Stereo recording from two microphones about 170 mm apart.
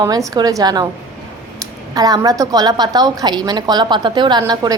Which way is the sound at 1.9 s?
20° right (ahead or behind).